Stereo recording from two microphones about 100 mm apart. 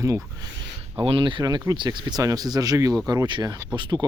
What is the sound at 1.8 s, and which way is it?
Speech, 35° right (ahead or behind).